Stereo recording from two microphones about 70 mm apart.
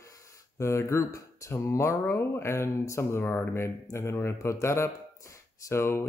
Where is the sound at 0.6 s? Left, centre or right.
Left.